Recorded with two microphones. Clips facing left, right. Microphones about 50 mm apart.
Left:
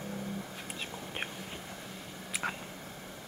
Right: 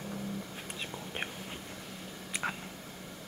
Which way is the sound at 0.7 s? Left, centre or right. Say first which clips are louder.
Right 1 dB; centre.